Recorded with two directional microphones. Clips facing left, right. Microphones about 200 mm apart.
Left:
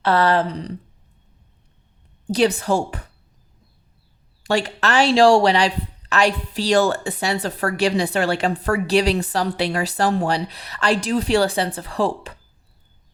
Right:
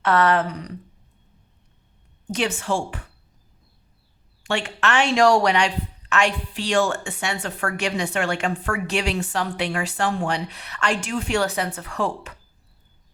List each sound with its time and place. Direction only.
0.0 s speech: 30° left (ahead or behind)
2.2 s speech: 35° left (ahead or behind)
4.4 s speech: 35° left (ahead or behind)